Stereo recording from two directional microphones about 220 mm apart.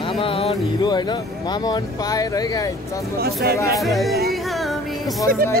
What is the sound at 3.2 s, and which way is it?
Speech, 45° right (ahead or behind).